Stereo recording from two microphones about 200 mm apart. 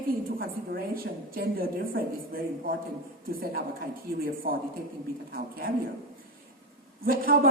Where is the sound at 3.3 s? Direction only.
45° right (ahead or behind).